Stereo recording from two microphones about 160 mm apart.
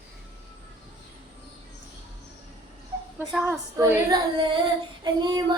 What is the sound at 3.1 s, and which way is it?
Music, 10° right (ahead or behind).